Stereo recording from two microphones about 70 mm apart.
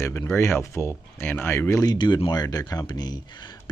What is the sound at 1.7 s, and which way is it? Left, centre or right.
Speech, left.